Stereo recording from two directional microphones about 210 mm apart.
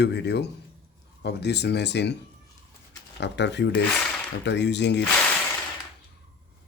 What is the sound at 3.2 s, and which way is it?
Speech, 55° left (ahead or behind).